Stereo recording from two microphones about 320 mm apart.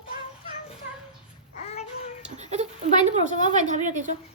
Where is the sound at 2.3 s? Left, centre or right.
Right.